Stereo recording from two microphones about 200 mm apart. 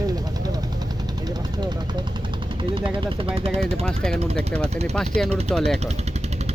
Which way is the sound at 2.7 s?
25° right (ahead or behind).